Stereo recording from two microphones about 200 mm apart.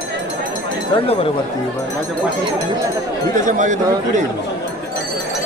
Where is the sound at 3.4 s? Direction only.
40° right (ahead or behind).